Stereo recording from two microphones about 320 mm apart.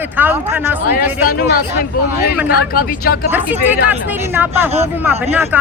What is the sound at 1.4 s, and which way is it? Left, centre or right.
Speech, left.